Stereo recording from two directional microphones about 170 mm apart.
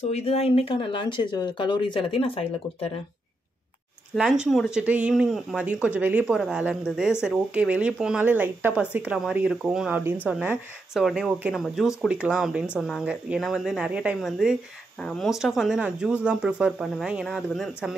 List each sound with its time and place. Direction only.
0.1 s speech: 35° left (ahead or behind)
4.1 s speech: 5° right (ahead or behind)